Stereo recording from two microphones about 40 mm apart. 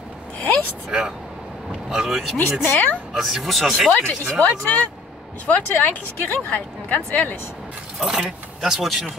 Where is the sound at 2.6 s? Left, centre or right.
Left.